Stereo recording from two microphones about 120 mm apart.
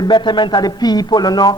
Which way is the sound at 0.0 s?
40° left (ahead or behind).